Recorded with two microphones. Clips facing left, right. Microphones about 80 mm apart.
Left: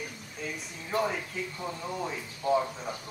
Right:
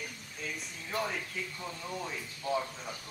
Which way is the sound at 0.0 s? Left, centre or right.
Centre.